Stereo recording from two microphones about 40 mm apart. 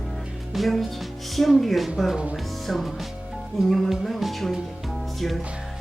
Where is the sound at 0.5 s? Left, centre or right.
Centre.